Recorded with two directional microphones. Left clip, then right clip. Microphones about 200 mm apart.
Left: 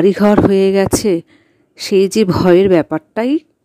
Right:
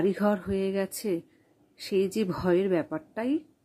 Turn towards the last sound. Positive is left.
turn(degrees=45)  # may be behind; listen again after turning